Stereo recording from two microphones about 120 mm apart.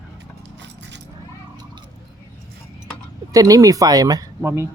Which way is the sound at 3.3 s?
30° right (ahead or behind).